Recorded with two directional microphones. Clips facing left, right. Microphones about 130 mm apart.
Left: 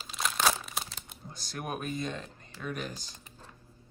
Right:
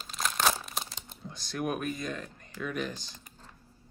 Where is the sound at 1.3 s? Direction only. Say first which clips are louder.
Right 5 dB; 35° left (ahead or behind).